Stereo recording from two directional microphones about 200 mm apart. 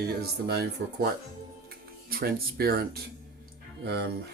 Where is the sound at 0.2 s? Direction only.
50° right (ahead or behind).